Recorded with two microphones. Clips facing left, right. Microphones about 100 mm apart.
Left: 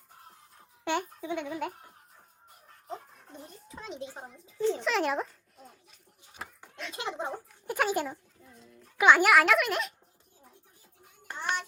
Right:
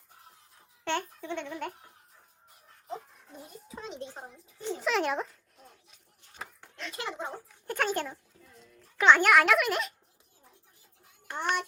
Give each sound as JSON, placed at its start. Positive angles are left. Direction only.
{"t": 0.9, "sound": "speech", "side_deg": 10}
{"t": 2.9, "sound": "a child's voice", "side_deg": -5}
{"t": 4.8, "sound": "a sound", "side_deg": 0}
{"t": 6.9, "sound": "a child's voice", "side_deg": 20}
{"t": 7.7, "sound": "a child's voice", "side_deg": 10}
{"t": 11.3, "sound": "hands", "side_deg": -55}